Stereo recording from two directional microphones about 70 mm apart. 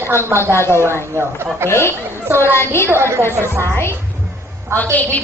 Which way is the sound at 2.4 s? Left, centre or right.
Left.